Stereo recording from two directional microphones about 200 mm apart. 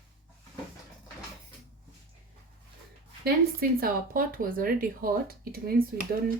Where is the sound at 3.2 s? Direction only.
50° right (ahead or behind).